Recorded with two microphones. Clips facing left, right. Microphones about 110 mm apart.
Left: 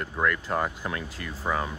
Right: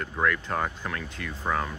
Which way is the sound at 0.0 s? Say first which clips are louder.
Even; 5° left (ahead or behind).